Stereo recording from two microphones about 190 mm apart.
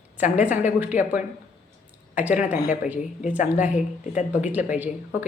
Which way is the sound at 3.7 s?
40° left (ahead or behind).